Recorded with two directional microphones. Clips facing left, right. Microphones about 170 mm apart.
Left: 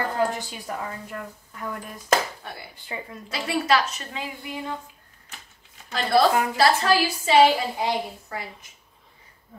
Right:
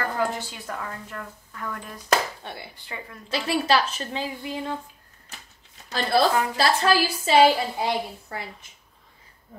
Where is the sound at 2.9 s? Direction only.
25° left (ahead or behind).